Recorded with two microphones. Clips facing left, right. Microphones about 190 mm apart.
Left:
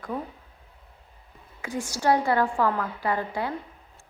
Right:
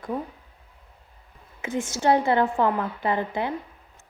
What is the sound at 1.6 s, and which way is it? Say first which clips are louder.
A woman's voice: right 2 dB; 25° right (ahead or behind).